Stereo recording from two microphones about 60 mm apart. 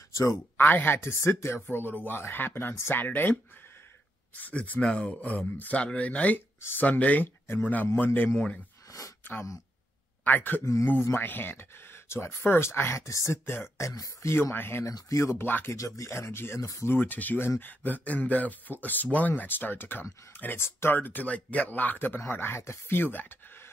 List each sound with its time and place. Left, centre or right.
0.1 s speech: left
0.6 s a man's voice: left
4.4 s a man's voice: left
10.6 s speech: left
11.1 s speech: left
13.0 s speech: left
14.2 s speech: left
14.9 s speech: left
15.4 s a man's voice: left
15.7 s speech: left
16.1 s speech: left
16.8 s a man's voice: left